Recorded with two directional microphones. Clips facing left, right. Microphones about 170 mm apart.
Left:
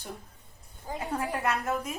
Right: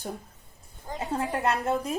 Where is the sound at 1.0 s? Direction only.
25° right (ahead or behind).